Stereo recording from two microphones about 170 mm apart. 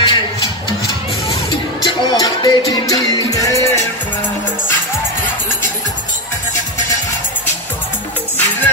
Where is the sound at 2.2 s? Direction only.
25° left (ahead or behind).